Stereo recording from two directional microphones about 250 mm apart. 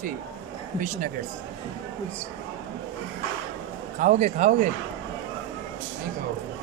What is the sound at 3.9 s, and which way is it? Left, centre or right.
Speech, right.